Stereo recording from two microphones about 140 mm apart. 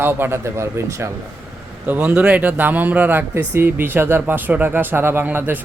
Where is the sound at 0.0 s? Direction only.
15° right (ahead or behind).